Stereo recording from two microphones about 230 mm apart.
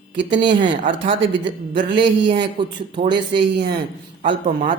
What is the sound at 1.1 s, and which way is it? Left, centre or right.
Speech, right.